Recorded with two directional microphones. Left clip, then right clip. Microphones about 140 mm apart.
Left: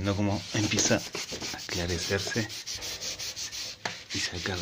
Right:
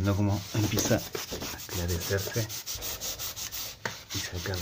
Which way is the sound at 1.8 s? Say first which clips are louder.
Left 1 dB; 35° left (ahead or behind).